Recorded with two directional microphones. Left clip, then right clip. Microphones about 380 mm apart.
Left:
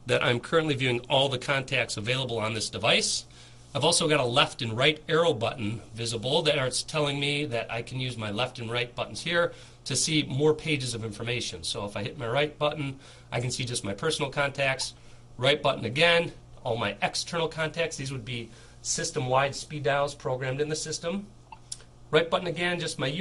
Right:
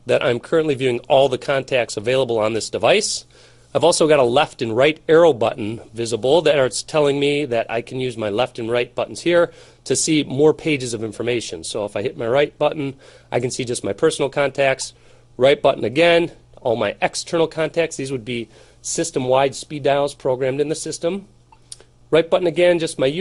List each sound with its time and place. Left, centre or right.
0.0 s speech: centre